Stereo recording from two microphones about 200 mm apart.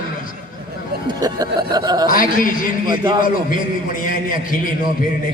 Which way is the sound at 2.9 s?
20° right (ahead or behind).